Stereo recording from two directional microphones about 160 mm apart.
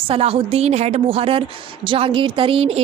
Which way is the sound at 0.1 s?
35° right (ahead or behind).